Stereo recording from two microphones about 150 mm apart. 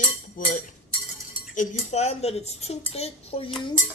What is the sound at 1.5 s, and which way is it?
Speech, 55° left (ahead or behind).